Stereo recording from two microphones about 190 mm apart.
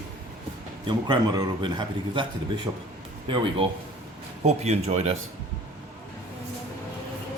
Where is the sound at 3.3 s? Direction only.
30° right (ahead or behind).